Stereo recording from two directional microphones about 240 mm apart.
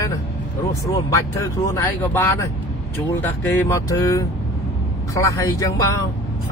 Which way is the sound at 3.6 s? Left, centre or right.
Centre.